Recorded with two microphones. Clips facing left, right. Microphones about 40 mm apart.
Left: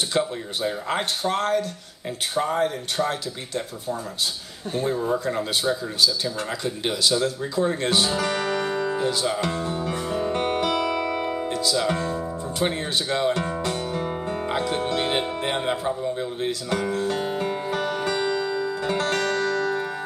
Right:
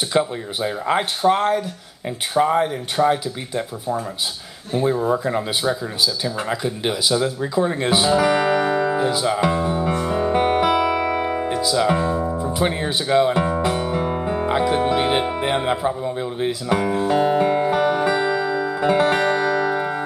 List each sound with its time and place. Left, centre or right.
0.1 s speech: centre
4.7 s speech: centre
12.4 s guitar: centre
14.1 s music: centre